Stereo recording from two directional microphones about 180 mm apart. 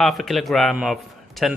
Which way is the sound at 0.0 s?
Centre (ahead or behind).